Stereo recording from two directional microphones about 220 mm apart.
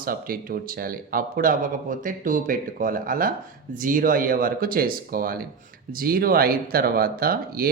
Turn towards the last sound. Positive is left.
turn(degrees=-40)  # may be behind; listen again after turning